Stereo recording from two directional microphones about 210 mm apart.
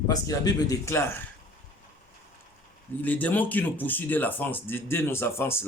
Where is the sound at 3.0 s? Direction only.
10° left (ahead or behind).